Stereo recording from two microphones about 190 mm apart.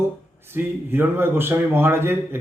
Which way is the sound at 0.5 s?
10° right (ahead or behind).